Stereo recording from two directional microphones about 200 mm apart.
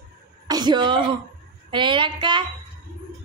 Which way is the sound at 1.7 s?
25° right (ahead or behind).